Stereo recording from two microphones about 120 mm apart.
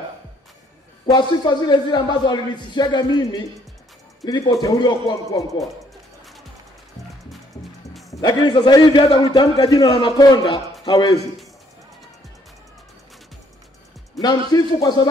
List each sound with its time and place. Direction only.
1.0 s a man's voice: 35° left (ahead or behind)
7.9 s music: centre (ahead or behind)
8.2 s a man's voice: 35° left (ahead or behind)
9.8 s a man's voice: 45° left (ahead or behind)
14.2 s a man's voice: 35° left (ahead or behind)